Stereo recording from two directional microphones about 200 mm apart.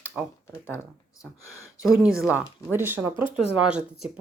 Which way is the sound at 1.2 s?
15° left (ahead or behind).